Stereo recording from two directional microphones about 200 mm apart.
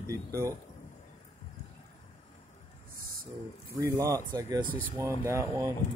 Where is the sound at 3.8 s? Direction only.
15° right (ahead or behind).